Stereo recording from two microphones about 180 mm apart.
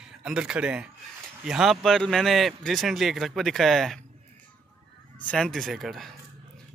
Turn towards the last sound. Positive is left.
turn(degrees=0)  # may be behind; listen again after turning